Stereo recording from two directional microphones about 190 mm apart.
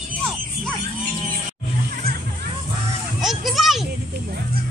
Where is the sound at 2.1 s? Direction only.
55° right (ahead or behind).